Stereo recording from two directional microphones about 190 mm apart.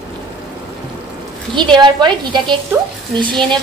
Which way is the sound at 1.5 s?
25° right (ahead or behind).